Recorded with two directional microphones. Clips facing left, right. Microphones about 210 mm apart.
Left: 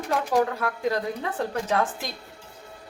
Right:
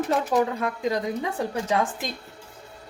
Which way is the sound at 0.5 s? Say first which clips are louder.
Even; 15° right (ahead or behind).